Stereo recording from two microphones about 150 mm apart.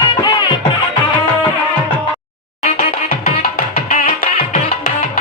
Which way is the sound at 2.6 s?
45° left (ahead or behind).